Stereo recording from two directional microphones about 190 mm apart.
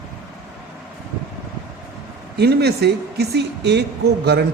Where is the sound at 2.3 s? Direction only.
60° right (ahead or behind).